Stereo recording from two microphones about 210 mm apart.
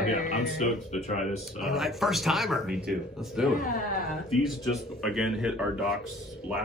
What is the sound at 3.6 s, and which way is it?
Speech, 40° left (ahead or behind).